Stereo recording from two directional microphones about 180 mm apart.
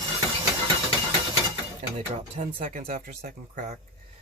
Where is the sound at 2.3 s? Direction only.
45° right (ahead or behind).